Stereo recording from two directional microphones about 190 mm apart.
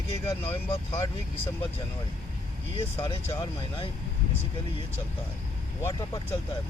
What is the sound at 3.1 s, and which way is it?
Speech, 25° left (ahead or behind).